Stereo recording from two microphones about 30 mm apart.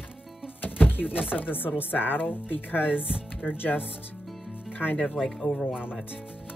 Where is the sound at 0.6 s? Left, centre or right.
Left.